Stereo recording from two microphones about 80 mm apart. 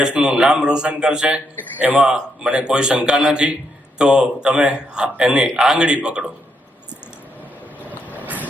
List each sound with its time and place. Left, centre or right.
0.0 s a man's voice: centre
7.9 s vehicle: right